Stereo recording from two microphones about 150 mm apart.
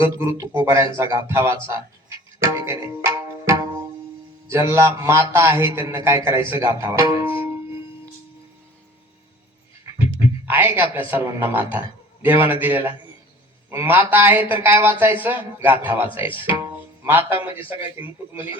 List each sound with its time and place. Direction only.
0.0 s speech: 20° right (ahead or behind)
2.4 s tabla: 20° right (ahead or behind)
4.4 s speech: 15° right (ahead or behind)
10.4 s a man's voice: 15° right (ahead or behind)
16.0 s speech: 35° left (ahead or behind)
16.5 s music: 15° right (ahead or behind)
17.6 s speech: 35° left (ahead or behind)